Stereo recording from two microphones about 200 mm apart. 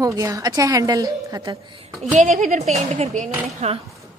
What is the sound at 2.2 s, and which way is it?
Speech, 40° right (ahead or behind).